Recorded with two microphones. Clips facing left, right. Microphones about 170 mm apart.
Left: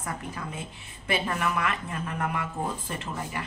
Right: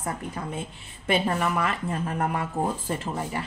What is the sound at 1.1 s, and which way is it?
Speech, 30° right (ahead or behind).